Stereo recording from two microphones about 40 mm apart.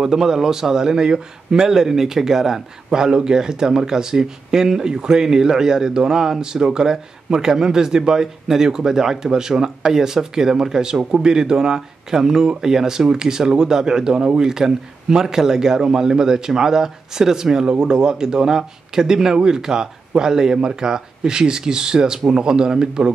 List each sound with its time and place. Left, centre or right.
0.0 s a man's voice: centre